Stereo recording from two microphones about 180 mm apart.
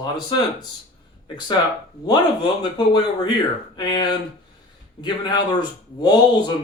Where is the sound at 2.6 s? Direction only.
25° left (ahead or behind).